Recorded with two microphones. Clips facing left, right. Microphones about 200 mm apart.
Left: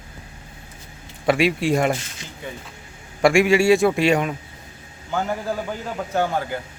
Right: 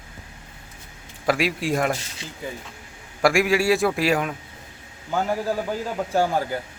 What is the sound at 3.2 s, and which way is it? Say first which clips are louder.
Speech: left 4 dB; centre (ahead or behind).